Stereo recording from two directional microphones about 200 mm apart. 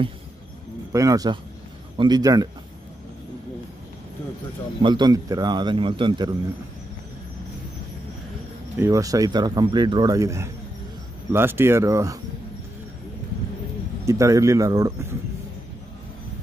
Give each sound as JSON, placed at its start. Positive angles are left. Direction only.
{"t": 0.9, "sound": "speech", "side_deg": -15}
{"t": 4.8, "sound": "speech", "side_deg": -20}
{"t": 8.7, "sound": "speech", "side_deg": -15}
{"t": 14.0, "sound": "speech", "side_deg": -15}